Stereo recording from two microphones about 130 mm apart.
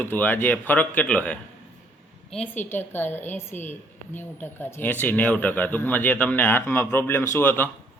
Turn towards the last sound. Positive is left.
turn(degrees=15)  # may be behind; listen again after turning